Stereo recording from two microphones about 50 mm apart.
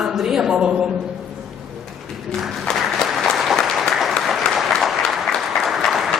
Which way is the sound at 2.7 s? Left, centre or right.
Centre.